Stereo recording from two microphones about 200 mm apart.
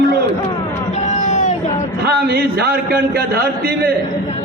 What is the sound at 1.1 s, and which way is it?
Music, 35° left (ahead or behind).